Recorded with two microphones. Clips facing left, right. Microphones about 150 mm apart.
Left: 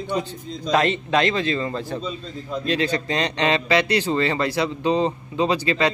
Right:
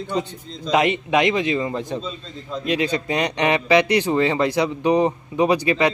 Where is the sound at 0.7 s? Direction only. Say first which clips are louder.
Right 1 dB; 15° right (ahead or behind).